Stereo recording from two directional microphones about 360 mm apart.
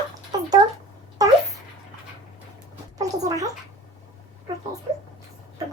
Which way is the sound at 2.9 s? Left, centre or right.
Centre.